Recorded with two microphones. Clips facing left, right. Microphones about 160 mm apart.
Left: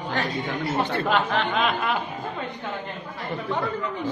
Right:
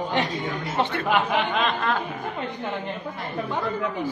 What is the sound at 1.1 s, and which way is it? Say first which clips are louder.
Speech: right 2 dB; 10° right (ahead or behind).